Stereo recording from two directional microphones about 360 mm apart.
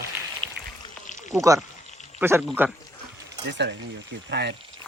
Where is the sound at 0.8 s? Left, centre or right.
Centre.